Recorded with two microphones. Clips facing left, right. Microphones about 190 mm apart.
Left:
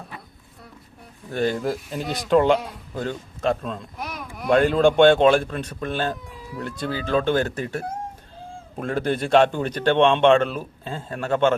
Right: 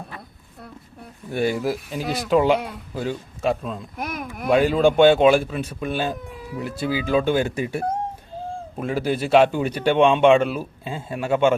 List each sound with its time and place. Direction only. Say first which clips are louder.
1.3 s speech: right 1 dB; 10° right (ahead or behind)
3.9 s a sound: right 4 dB; 50° right (ahead or behind)
4.4 s speech: even; 5° right (ahead or behind)